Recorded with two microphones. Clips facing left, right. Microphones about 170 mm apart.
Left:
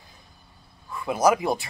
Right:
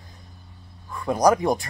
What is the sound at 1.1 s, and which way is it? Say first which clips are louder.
Speech: right 2 dB; 5° left (ahead or behind).